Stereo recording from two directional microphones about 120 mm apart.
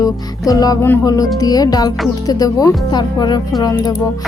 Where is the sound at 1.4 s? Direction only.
30° left (ahead or behind).